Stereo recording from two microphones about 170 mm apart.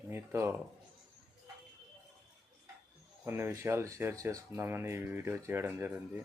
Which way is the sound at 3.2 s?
15° right (ahead or behind).